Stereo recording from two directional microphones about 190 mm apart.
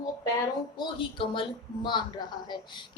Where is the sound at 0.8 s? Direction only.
25° left (ahead or behind).